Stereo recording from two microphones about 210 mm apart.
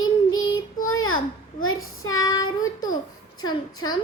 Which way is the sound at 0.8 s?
80° left.